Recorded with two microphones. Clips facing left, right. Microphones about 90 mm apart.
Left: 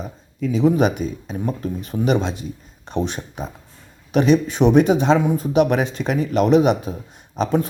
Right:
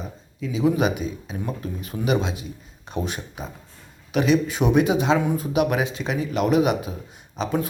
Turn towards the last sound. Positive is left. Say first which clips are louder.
# left 5 dB
turn(degrees=40)  # may be behind; listen again after turning